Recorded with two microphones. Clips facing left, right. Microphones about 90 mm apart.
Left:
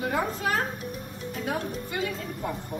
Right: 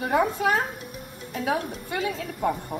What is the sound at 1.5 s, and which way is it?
Speech, 70° right (ahead or behind).